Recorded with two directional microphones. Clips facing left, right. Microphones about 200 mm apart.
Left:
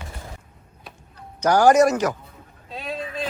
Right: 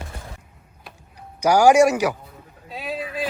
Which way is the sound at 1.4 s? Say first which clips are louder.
Right 1 dB; 10° right (ahead or behind).